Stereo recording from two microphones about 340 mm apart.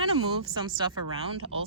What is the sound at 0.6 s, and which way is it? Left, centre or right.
Speech, centre.